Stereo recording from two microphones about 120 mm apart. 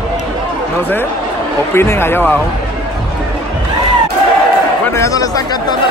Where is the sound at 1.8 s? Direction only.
20° left (ahead or behind).